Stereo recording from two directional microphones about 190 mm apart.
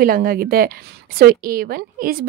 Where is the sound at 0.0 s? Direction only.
50° right (ahead or behind).